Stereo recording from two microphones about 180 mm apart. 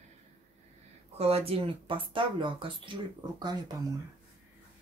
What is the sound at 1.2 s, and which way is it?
Speech, 35° right (ahead or behind).